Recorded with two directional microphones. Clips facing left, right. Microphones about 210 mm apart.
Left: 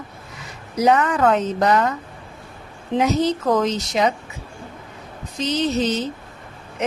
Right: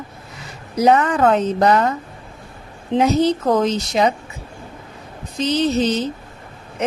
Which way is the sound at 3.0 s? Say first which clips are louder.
Right 3 dB; 30° right (ahead or behind).